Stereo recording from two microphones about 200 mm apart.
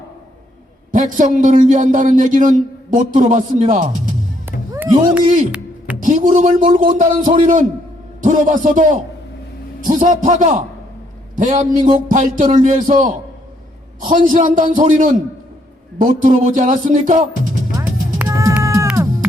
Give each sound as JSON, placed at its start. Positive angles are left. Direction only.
{"t": 0.9, "sound": "a man's voice", "side_deg": -40}
{"t": 4.4, "sound": "music", "side_deg": -10}
{"t": 6.0, "sound": "a man's voice", "side_deg": -40}
{"t": 17.7, "sound": "a sound", "side_deg": -15}